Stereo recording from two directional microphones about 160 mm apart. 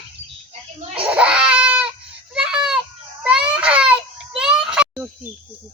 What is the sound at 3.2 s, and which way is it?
Babbling, 5° right (ahead or behind).